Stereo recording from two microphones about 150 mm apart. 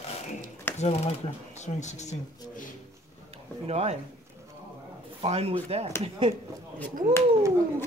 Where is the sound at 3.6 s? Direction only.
45° right (ahead or behind).